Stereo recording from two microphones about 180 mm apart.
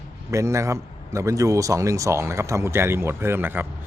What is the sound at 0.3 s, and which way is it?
Speech, 15° right (ahead or behind).